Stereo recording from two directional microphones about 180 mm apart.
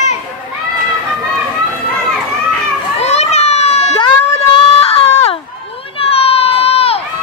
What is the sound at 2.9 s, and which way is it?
Children playing, 40° left (ahead or behind).